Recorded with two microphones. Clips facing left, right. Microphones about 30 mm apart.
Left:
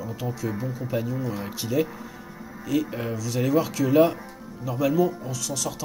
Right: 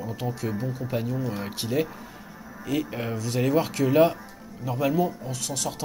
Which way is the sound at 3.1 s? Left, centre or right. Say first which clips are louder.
Even; right.